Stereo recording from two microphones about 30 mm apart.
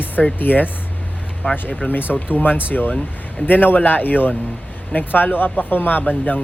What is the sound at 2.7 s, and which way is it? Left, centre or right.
Speech, left.